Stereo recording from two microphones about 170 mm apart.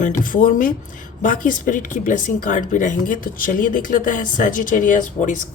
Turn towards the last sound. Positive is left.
turn(degrees=50)  # may be behind; listen again after turning